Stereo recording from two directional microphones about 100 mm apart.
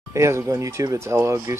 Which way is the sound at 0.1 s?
30° right (ahead or behind).